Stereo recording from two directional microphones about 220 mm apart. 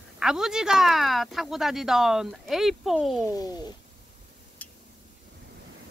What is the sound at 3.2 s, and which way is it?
Speech, 15° left (ahead or behind).